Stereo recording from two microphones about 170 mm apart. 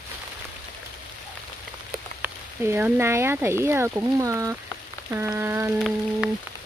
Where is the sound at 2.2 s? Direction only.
15° right (ahead or behind).